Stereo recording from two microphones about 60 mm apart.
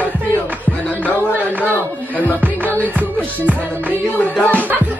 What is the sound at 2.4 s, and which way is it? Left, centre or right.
Music, right.